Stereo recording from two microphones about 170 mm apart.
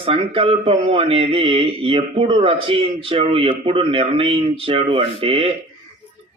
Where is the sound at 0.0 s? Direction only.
35° right (ahead or behind).